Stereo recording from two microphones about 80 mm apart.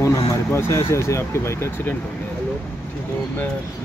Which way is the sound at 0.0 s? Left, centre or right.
Left.